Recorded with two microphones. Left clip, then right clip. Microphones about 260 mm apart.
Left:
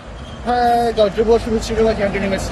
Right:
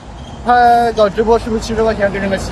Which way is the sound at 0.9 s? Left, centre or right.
Right.